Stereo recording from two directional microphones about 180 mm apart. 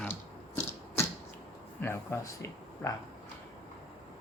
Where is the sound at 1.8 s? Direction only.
15° left (ahead or behind).